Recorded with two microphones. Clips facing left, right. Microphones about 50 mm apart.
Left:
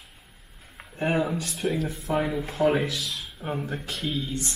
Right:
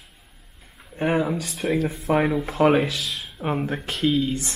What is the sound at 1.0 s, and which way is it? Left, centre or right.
Speech, right.